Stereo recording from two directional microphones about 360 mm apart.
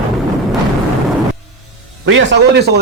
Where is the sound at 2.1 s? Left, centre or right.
Right.